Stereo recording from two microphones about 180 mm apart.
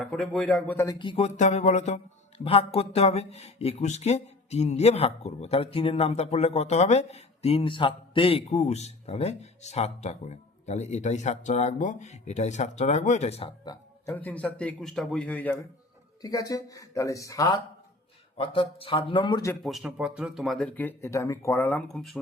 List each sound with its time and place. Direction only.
0.0 s speech: 5° left (ahead or behind)
0.9 s speech: 30° left (ahead or behind)
13.7 s a man's voice: 15° left (ahead or behind)
16.2 s speech: 20° left (ahead or behind)
18.3 s speech: 30° left (ahead or behind)
19.6 s speech: centre (ahead or behind)